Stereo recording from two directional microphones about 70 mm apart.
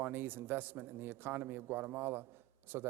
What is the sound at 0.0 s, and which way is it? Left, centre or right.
Speech, right.